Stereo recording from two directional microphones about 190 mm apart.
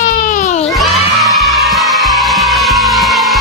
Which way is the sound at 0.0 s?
45° left (ahead or behind).